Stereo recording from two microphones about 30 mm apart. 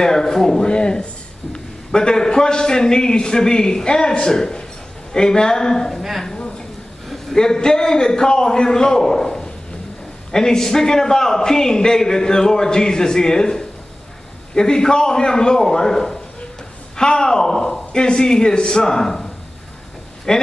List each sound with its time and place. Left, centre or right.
0.0 s speech: centre
0.7 s a man's voice: left
7.3 s a man's voice: left